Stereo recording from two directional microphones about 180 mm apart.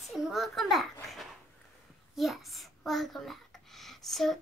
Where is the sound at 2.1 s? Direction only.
Centre (ahead or behind).